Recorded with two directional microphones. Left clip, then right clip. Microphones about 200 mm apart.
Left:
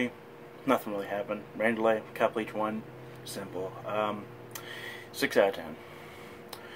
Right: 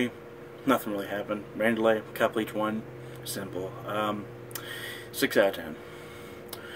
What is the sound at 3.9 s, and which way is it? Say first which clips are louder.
Speech: right 1 dB; 10° right (ahead or behind).